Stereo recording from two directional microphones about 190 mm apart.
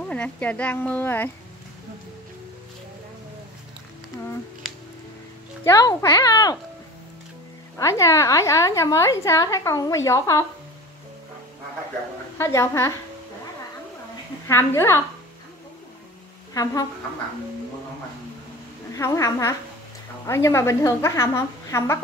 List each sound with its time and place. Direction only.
0.0 s a woman's voice: 5° left (ahead or behind)
5.6 s a child's voice: 20° left (ahead or behind)
7.7 s a woman's voice: 15° left (ahead or behind)
12.4 s a woman's voice: 15° left (ahead or behind)
14.5 s a woman's voice: 10° left (ahead or behind)
18.9 s a woman's voice: 15° left (ahead or behind)